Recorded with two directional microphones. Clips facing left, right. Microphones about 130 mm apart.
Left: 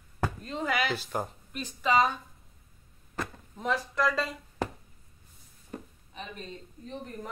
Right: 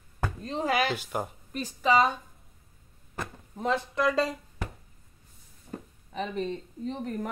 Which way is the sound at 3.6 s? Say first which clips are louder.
Right 2 dB; 25° right (ahead or behind).